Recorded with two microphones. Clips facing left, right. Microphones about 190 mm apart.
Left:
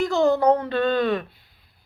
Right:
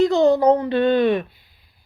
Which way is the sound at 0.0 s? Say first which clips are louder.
Right 4 dB; 20° right (ahead or behind).